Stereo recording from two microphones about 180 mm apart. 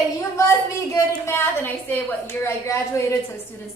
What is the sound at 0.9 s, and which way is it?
A woman's voice, 15° left (ahead or behind).